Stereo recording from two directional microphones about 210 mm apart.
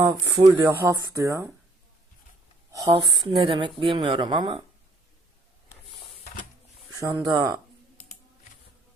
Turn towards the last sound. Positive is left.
turn(degrees=-20)  # may be behind; listen again after turning